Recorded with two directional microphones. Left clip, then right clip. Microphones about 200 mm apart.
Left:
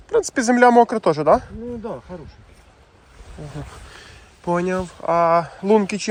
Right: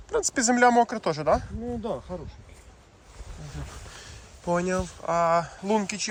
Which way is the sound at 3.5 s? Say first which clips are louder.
Left 3 dB; 5° right (ahead or behind).